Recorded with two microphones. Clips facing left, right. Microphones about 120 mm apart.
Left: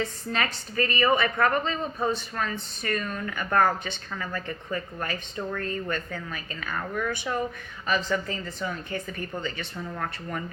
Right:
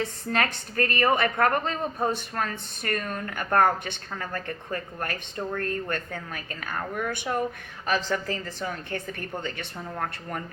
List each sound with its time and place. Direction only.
0.3 s a woman's voice: 55° right (ahead or behind)
7.9 s a woman's voice: 70° right (ahead or behind)
10.0 s a woman's voice: 45° right (ahead or behind)